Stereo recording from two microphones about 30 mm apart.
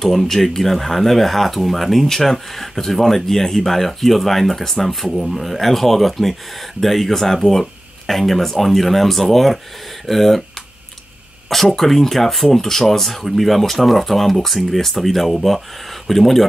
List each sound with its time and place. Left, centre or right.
0.0 s speech: centre
11.4 s speech: centre